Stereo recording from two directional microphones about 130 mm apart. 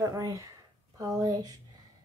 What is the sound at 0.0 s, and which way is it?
Speech, 25° right (ahead or behind).